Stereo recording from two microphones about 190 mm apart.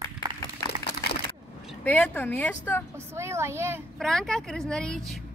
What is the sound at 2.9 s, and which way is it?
Speech, 15° right (ahead or behind).